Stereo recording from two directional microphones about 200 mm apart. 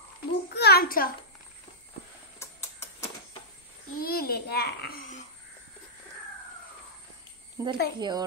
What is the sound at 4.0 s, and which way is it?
A child's voice, 50° left (ahead or behind).